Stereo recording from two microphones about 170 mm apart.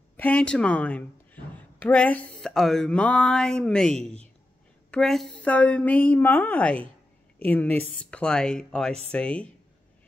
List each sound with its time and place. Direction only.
0.2 s a woman's voice: 5° left (ahead or behind)